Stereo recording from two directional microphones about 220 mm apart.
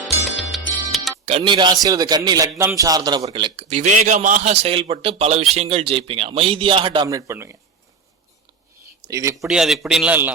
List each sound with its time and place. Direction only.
0.0 s music: centre (ahead or behind)
1.2 s speech: 25° right (ahead or behind)
9.0 s speech: 15° right (ahead or behind)
9.6 s a man's voice: centre (ahead or behind)